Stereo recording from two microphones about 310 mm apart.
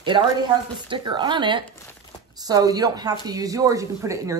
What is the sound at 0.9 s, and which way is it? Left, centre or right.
Speech, centre.